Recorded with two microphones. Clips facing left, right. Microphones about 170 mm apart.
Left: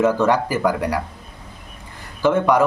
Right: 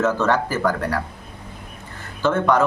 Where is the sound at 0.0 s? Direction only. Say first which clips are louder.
Left 3 dB; 10° left (ahead or behind).